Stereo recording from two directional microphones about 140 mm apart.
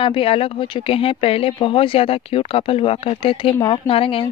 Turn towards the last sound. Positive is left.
turn(degrees=40)  # may be behind; listen again after turning